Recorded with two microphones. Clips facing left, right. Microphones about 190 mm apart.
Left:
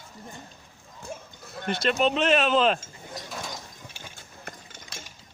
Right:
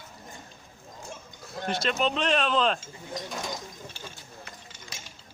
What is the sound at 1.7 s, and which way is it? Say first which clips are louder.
Speech: left 3 dB; centre (ahead or behind).